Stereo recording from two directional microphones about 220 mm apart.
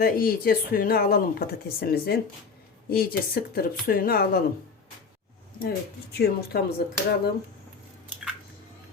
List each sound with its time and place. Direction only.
0.0 s speech: 40° left (ahead or behind)
5.5 s speech: 45° left (ahead or behind)